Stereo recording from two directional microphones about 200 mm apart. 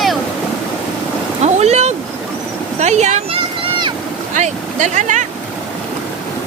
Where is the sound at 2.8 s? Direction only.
35° right (ahead or behind).